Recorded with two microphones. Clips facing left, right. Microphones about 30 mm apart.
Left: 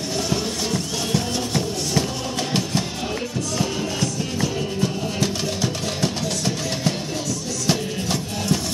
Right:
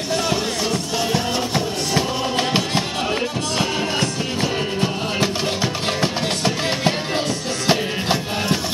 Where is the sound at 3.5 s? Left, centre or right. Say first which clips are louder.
Right 4 dB; right.